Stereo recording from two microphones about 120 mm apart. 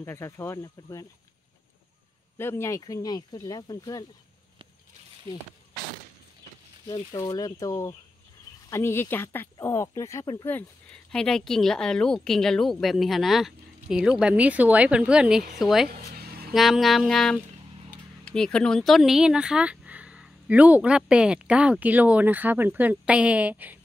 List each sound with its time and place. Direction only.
0.0 s speech: 20° left (ahead or behind)
2.3 s speech: 20° left (ahead or behind)
7.2 s speech: 30° left (ahead or behind)
11.1 s speech: 5° left (ahead or behind); by 23.8 s 15° right (ahead or behind)